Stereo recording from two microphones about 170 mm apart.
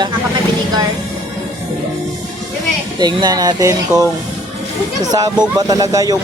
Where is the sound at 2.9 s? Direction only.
25° right (ahead or behind).